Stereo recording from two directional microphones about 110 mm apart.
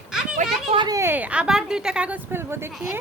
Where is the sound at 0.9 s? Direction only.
30° right (ahead or behind).